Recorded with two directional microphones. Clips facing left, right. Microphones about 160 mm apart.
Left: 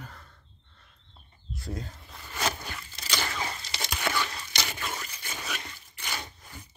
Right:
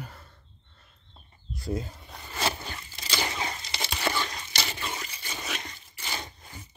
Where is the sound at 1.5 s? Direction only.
5° right (ahead or behind).